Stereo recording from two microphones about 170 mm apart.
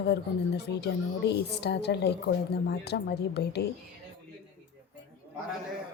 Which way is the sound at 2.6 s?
75° left (ahead or behind).